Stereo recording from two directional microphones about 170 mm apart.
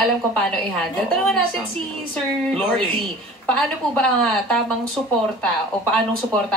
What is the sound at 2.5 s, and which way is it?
A man's voice, 5° left (ahead or behind).